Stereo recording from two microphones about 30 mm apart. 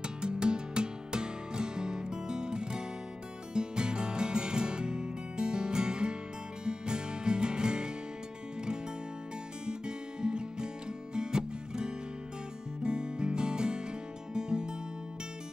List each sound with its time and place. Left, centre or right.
0.0 s music: right
9.7 s music: right